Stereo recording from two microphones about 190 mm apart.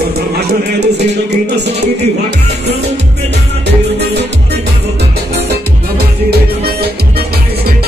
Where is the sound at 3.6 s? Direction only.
65° right (ahead or behind).